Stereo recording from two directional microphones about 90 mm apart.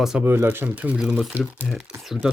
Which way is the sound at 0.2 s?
25° right (ahead or behind).